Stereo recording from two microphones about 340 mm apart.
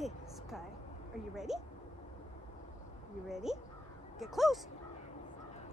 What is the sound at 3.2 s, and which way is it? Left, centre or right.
Speech, centre.